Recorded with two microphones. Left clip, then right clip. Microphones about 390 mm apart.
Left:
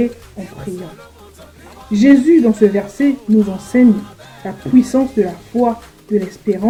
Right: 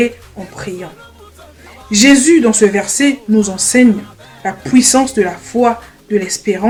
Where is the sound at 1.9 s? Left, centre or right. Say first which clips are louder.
Right 2 dB; right.